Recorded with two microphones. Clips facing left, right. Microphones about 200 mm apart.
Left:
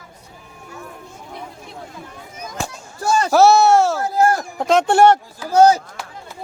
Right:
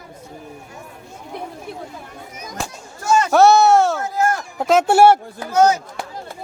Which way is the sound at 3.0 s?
35° left (ahead or behind).